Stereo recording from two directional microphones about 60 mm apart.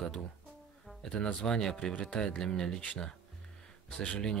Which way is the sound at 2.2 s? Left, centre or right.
Centre.